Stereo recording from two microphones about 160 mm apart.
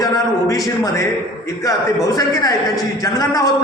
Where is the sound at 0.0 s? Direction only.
20° left (ahead or behind).